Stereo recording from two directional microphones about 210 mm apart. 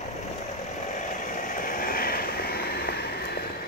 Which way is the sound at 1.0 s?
40° left (ahead or behind).